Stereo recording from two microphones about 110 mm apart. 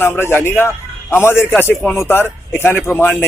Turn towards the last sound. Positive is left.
turn(degrees=20)  # may be behind; listen again after turning